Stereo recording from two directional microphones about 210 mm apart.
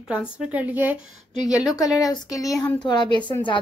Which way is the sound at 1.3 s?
20° left (ahead or behind).